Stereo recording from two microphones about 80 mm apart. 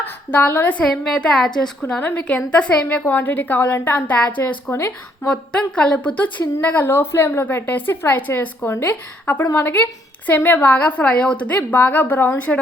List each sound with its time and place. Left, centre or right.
0.0 s a woman's voice: left
0.9 s a woman's voice: centre
2.0 s a woman's voice: centre
4.1 s a woman's voice: centre
5.3 s a woman's voice: centre